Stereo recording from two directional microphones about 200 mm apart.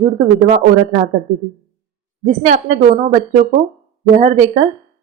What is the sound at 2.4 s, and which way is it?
Speech, 40° right (ahead or behind).